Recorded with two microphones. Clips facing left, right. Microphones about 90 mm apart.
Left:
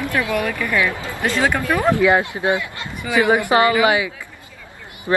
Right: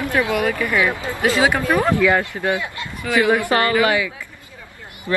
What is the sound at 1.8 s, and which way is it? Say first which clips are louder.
Speech: left 1 dB; 15° left (ahead or behind).